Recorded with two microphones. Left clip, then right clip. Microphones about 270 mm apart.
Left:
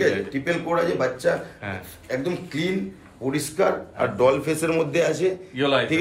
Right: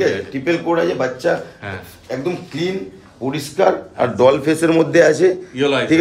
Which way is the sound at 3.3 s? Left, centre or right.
Right.